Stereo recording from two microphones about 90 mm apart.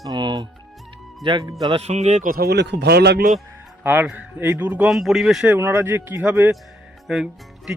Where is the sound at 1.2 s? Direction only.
70° right (ahead or behind).